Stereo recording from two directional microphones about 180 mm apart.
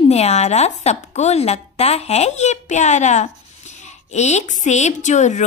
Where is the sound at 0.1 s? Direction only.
35° left (ahead or behind).